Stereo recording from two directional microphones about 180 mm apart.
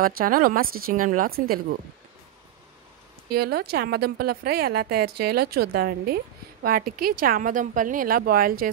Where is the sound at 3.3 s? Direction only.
60° right (ahead or behind).